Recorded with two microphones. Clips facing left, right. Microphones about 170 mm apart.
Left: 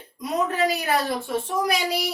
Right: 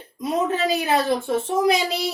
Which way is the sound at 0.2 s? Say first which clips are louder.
Right 1 dB; 25° right (ahead or behind).